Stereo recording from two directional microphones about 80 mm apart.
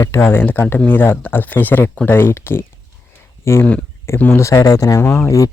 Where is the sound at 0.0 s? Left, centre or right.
Left.